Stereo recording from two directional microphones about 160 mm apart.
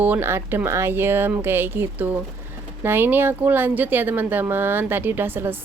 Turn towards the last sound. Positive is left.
turn(degrees=-15)  # may be behind; listen again after turning